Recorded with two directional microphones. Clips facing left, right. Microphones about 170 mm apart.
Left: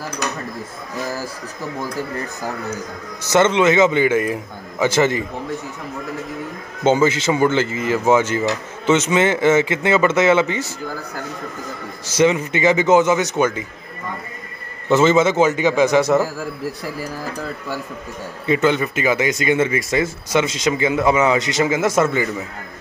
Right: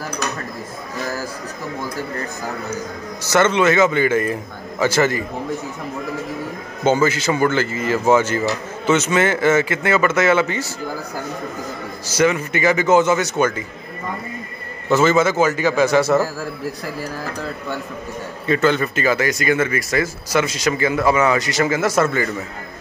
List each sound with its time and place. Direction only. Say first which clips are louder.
3.3 s speech: left 1 dB; 20° left (ahead or behind)
6.8 s speech: left 1 dB; 20° left (ahead or behind)
12.1 s speech: left 2 dB; 20° left (ahead or behind)
14.9 s speech: left 1 dB; 20° left (ahead or behind)
18.5 s speech: even; 15° left (ahead or behind)